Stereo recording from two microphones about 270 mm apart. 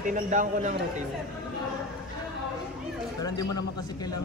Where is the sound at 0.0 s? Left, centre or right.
Right.